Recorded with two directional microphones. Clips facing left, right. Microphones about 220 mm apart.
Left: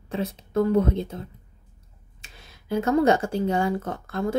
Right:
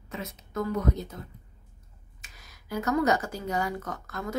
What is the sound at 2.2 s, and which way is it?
Speech, 30° left (ahead or behind).